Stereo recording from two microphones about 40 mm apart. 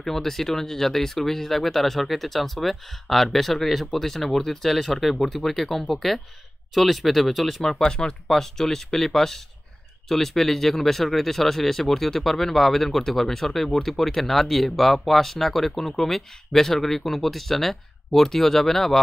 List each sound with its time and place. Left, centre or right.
0.0 s speech: centre
7.8 s speech: centre